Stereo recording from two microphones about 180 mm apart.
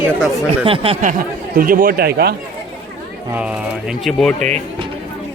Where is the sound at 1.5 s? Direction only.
50° right (ahead or behind).